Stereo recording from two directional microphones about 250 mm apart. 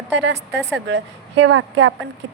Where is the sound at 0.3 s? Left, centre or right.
Right.